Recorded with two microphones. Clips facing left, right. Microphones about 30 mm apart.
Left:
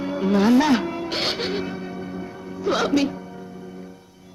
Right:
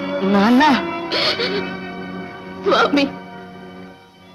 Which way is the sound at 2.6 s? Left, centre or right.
Right.